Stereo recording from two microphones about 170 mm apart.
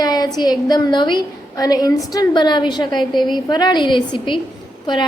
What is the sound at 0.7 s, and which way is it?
A woman's voice, 25° left (ahead or behind).